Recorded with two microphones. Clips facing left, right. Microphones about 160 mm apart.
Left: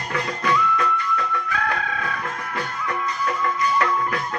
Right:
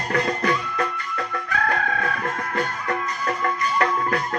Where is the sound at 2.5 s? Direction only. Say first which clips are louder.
Right 1 dB; 45° right (ahead or behind).